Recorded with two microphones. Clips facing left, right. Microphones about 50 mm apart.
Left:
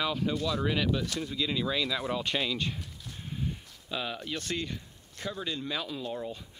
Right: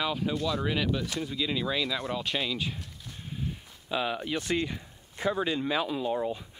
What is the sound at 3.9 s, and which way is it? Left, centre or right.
Speech, centre.